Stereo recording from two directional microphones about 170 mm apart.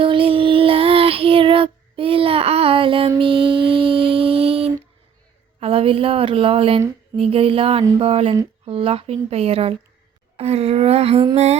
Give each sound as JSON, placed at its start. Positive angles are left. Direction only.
{"t": 0.0, "sound": "child singing", "side_deg": -30}
{"t": 3.2, "sound": "music", "side_deg": -30}
{"t": 5.5, "sound": "a woman's voice", "side_deg": -35}